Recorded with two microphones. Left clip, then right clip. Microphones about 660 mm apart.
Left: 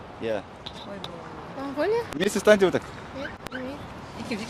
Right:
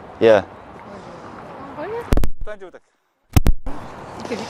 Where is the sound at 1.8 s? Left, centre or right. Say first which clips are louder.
Left 5 dB; left.